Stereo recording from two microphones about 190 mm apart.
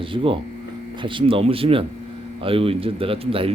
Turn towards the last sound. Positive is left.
turn(degrees=-30)  # may be behind; listen again after turning